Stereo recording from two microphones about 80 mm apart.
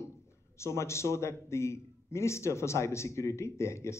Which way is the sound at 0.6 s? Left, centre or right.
Left.